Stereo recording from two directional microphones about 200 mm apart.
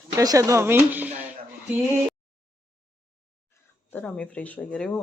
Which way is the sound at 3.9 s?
5° left (ahead or behind).